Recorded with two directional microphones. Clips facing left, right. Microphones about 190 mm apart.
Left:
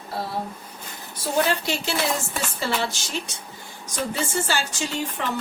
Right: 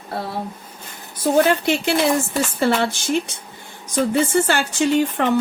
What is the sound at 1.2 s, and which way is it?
Speech, 55° right (ahead or behind).